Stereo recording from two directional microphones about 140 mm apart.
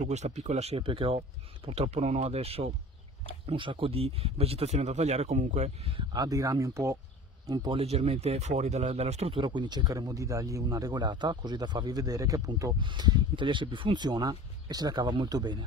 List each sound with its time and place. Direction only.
0.0 s speech: 55° right (ahead or behind)
6.1 s a man's voice: 25° right (ahead or behind)
7.7 s speech: 45° right (ahead or behind); by 15.6 s 30° right (ahead or behind)